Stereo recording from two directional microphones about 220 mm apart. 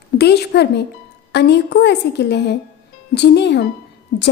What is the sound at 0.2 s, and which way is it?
A woman's voice, 50° left (ahead or behind).